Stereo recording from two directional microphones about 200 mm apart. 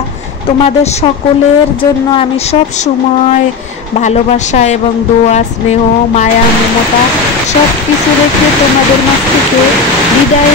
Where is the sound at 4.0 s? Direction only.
35° left (ahead or behind).